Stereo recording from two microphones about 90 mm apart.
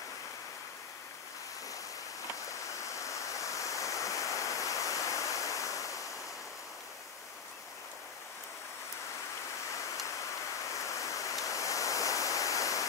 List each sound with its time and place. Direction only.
2.7 s waterfall: 35° left (ahead or behind)
10.7 s waterfall: 35° left (ahead or behind)